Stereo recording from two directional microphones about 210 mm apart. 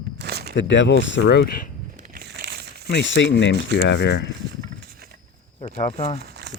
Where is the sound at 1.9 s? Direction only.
40° right (ahead or behind).